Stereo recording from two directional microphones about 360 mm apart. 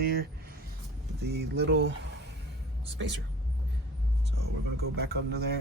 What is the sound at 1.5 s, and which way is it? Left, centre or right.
Speech, right.